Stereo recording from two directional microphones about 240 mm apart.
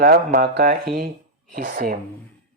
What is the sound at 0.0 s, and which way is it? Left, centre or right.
Speech, right.